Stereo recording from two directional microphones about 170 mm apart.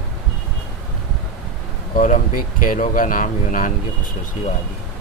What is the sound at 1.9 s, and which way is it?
Speech, 55° left (ahead or behind).